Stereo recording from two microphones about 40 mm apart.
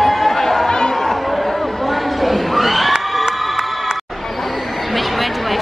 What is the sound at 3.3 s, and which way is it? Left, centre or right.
Crowd, centre.